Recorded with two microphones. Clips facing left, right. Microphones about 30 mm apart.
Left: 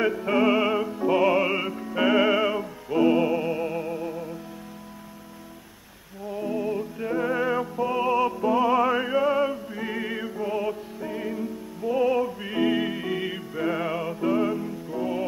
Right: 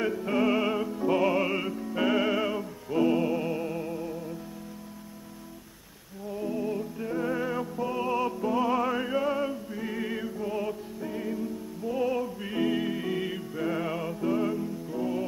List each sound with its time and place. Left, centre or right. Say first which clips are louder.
0.0 s music: left 4 dB; centre
6.2 s music: left 3 dB; left